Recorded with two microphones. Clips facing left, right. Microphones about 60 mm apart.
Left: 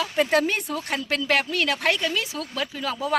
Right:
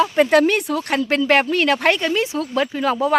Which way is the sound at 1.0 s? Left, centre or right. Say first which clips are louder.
Right 7 dB; right.